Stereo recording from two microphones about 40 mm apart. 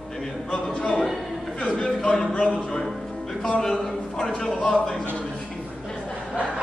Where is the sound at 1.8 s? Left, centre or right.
Centre.